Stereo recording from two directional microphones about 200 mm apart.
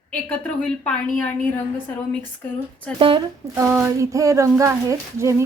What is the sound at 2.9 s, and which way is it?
Speech, 5° left (ahead or behind).